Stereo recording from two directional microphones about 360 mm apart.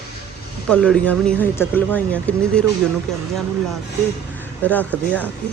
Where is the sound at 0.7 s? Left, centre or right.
Centre.